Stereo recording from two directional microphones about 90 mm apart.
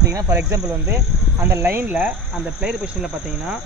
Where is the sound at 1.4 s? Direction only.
20° right (ahead or behind).